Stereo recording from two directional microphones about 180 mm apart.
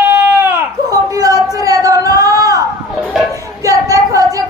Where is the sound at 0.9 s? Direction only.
20° right (ahead or behind).